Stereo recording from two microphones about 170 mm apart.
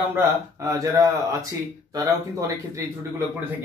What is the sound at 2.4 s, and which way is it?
Speech, 20° right (ahead or behind).